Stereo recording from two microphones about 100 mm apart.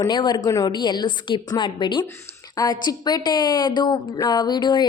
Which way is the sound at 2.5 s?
40° left (ahead or behind).